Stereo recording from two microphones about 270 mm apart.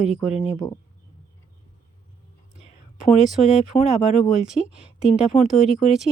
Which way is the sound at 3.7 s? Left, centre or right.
Centre.